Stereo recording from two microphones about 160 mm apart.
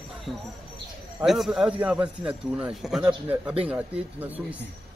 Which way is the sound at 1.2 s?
Centre (ahead or behind).